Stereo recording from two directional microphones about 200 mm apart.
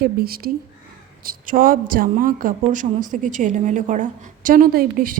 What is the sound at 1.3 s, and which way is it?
A woman's voice, 45° right (ahead or behind).